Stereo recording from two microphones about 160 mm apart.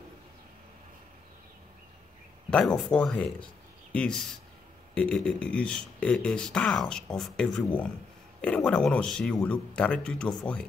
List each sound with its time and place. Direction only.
2.5 s speech: 5° left (ahead or behind)